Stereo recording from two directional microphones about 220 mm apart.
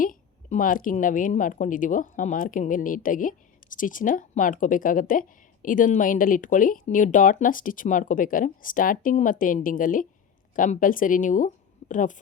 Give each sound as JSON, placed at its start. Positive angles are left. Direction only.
{"t": 0.0, "sound": "a woman's voice", "side_deg": 40}